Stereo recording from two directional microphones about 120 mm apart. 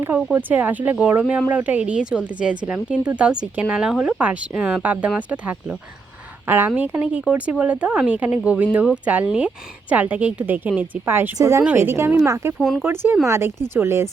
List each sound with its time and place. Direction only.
0.3 s speech: 15° right (ahead or behind)
11.6 s speech: 15° right (ahead or behind)
12.5 s speech: centre (ahead or behind)
12.8 s speech: 20° right (ahead or behind)